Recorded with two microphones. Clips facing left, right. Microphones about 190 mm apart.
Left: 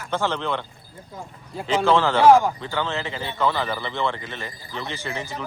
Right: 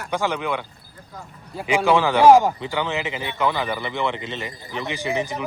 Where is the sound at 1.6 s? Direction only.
15° right (ahead or behind).